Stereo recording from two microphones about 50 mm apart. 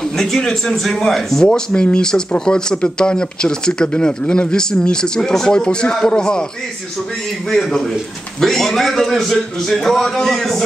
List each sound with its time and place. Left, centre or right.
0.0 s speech: centre
1.5 s speech: left
7.4 s speech: centre